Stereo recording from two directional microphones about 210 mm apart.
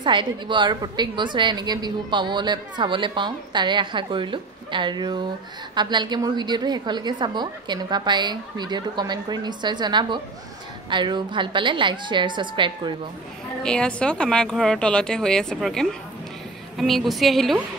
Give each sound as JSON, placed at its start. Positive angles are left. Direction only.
{"t": 0.0, "sound": "a woman's voice", "side_deg": -25}
{"t": 13.6, "sound": "speech", "side_deg": 5}